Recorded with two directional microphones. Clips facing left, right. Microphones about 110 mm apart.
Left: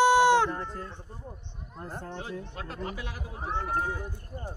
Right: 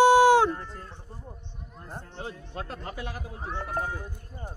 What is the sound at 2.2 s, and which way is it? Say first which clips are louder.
Speech: even; 35° right (ahead or behind).